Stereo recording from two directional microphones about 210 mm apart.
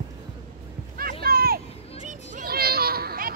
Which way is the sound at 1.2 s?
45° right (ahead or behind).